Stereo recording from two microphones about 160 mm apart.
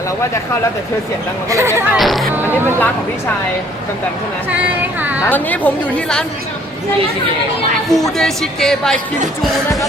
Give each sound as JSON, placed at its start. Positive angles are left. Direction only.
{"t": 1.5, "sound": "speech", "side_deg": -20}
{"t": 1.9, "sound": "speech", "side_deg": 0}
{"t": 2.3, "sound": "speech", "side_deg": -10}
{"t": 4.5, "sound": "speech", "side_deg": -10}
{"t": 5.3, "sound": "a woman's voice", "side_deg": 10}
{"t": 7.9, "sound": "speech", "side_deg": 0}